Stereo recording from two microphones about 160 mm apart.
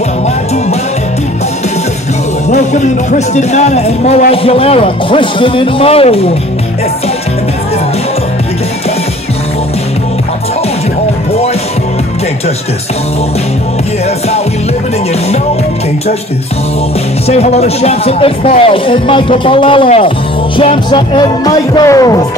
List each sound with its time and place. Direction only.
2.5 s speech: 45° left (ahead or behind)
17.3 s speech: 40° left (ahead or behind)
20.5 s music: 35° left (ahead or behind)